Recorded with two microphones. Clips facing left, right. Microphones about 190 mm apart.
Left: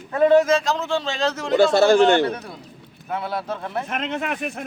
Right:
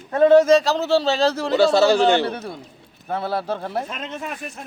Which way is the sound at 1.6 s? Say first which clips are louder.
Left 1 dB; 55° left (ahead or behind).